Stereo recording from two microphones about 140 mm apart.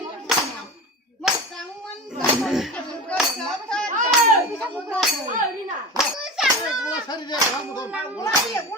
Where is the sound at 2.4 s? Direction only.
Centre (ahead or behind).